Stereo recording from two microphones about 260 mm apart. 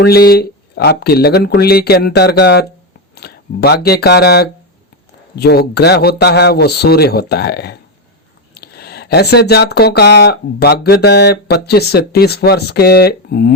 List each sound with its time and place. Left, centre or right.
0.0 s speech: left